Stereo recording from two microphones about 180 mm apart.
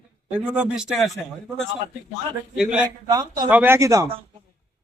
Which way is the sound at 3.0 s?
20° right (ahead or behind).